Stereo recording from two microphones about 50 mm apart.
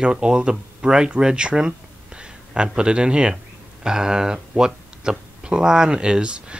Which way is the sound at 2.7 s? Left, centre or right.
Centre.